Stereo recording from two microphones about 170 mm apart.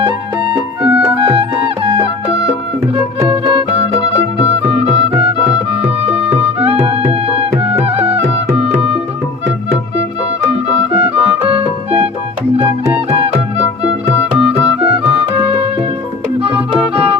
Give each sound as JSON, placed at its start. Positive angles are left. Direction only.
{"t": 0.8, "sound": "music", "side_deg": -5}
{"t": 1.2, "sound": "music", "side_deg": -35}
{"t": 4.6, "sound": "music", "side_deg": -35}
{"t": 6.6, "sound": "music", "side_deg": -35}
{"t": 11.2, "sound": "music", "side_deg": -35}